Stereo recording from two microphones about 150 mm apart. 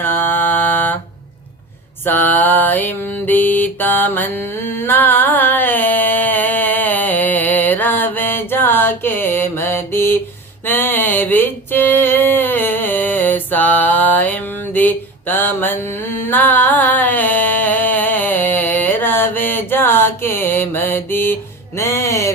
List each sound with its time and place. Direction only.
0.0 s mantra: 15° left (ahead or behind)
2.0 s mantra: 10° left (ahead or behind)
10.7 s a sound: 15° left (ahead or behind)
21.8 s music: 20° left (ahead or behind)